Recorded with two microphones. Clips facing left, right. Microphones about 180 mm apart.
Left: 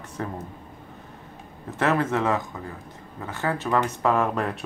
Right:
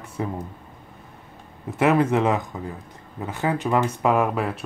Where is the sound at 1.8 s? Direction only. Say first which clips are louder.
Right 4 dB; 15° right (ahead or behind).